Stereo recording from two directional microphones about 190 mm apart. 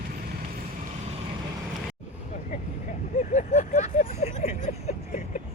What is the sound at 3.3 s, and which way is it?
Vehicle, 40° left (ahead or behind).